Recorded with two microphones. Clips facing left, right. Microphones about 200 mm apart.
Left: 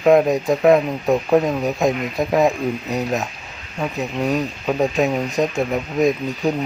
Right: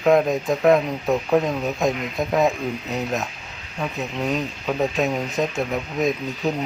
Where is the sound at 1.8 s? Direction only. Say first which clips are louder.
Left 3 dB; centre (ahead or behind).